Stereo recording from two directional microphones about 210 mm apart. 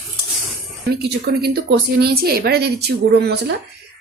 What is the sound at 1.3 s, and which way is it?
A woman's voice, 50° right (ahead or behind).